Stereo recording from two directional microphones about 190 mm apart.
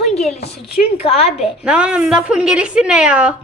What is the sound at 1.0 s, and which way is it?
Child singing, 30° left (ahead or behind).